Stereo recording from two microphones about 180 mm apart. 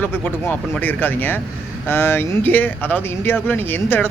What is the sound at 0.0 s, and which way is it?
Speech, 10° left (ahead or behind).